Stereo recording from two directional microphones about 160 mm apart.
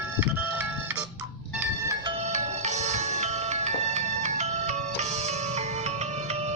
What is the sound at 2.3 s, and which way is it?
Music, 45° right (ahead or behind).